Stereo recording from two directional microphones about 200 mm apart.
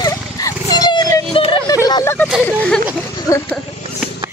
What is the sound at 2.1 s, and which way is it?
Speech, centre (ahead or behind).